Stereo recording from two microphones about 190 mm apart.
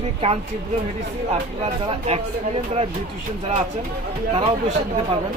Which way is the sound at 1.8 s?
30° right (ahead or behind).